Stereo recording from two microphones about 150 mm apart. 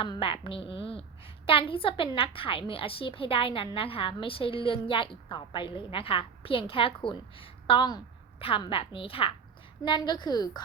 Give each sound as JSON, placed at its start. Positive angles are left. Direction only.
{"t": 0.0, "sound": "a woman's voice", "side_deg": 35}